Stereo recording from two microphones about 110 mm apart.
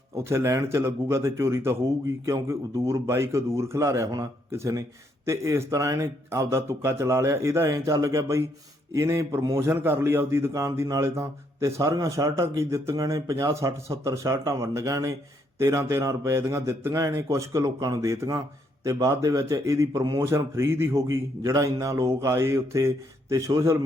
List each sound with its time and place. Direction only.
0.3 s a man's voice: 25° right (ahead or behind)